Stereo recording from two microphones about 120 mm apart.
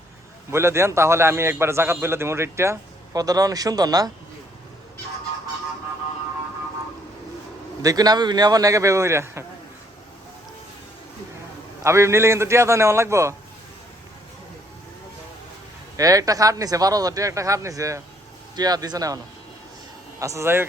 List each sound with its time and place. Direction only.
0.5 s a man's voice: 20° right (ahead or behind)
7.8 s a man's voice: 30° right (ahead or behind)
11.8 s a man's voice: 25° right (ahead or behind)
16.0 s a man's voice: 30° right (ahead or behind)